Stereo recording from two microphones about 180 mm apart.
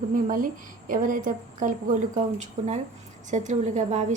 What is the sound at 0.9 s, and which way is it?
A woman's voice, 50° right (ahead or behind).